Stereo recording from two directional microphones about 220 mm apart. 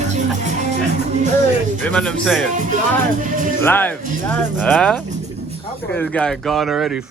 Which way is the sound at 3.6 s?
10° left (ahead or behind).